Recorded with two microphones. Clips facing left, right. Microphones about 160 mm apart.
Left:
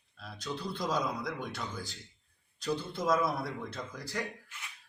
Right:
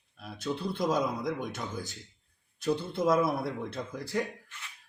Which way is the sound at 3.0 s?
25° right (ahead or behind).